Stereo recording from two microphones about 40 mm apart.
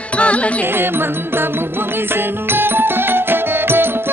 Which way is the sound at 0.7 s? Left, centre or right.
Right.